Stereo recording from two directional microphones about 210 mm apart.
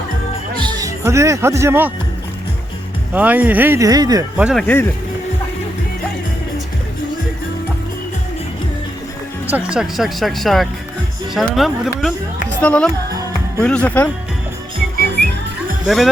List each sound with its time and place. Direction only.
0.6 s a man's voice: 15° right (ahead or behind)
3.1 s speech: 5° right (ahead or behind)
4.4 s speech: 5° right (ahead or behind)
4.6 s speech: 10° left (ahead or behind)
9.5 s speech: 5° right (ahead or behind)
14.9 s music: 50° right (ahead or behind)